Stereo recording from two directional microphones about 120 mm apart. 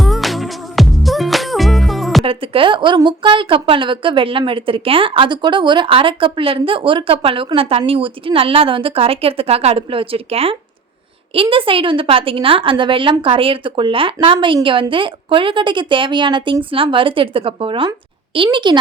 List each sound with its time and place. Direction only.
0.0 s music: centre (ahead or behind)
2.2 s a woman's voice: 50° right (ahead or behind)